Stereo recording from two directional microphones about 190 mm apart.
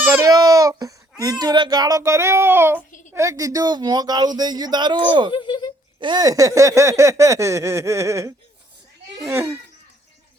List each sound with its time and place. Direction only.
0.0 s babbling: 15° right (ahead or behind)
1.2 s speech: 20° right (ahead or behind)
5.3 s speech: 25° left (ahead or behind)
6.0 s speech: 20° right (ahead or behind)
9.3 s speech: 10° right (ahead or behind)